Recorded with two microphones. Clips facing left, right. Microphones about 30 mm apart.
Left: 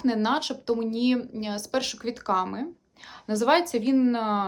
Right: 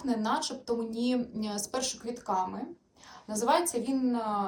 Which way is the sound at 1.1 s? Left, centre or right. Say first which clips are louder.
Left 3 dB; left.